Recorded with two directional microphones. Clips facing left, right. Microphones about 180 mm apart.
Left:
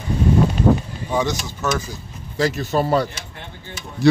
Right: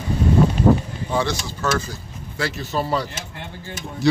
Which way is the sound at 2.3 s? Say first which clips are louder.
Left 5 dB; 45° left (ahead or behind).